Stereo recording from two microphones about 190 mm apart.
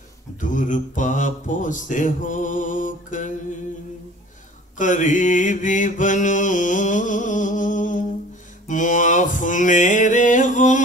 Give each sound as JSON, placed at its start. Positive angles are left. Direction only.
{"t": 0.4, "sound": "mantra", "side_deg": 40}
{"t": 4.7, "sound": "mantra", "side_deg": 40}